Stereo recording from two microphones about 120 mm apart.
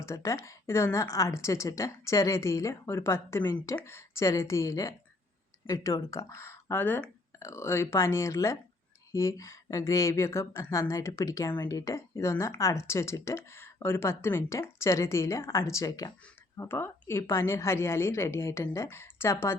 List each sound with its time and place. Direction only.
0.0 s speech: 25° left (ahead or behind)